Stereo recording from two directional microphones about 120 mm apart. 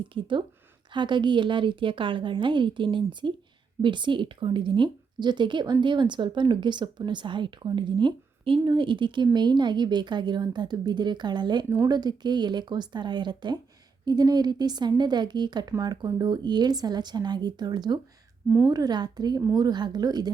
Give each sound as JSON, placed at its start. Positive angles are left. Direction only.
{"t": 0.1, "sound": "a woman's voice", "side_deg": -45}